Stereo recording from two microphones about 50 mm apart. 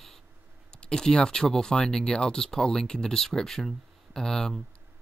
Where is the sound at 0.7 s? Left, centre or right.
Centre.